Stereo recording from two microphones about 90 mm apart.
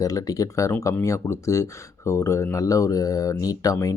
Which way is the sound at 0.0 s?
40° left (ahead or behind).